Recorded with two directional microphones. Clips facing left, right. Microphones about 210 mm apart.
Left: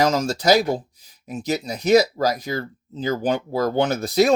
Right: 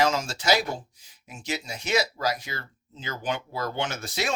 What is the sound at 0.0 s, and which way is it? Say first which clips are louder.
Speech: left 6 dB; 40° left (ahead or behind).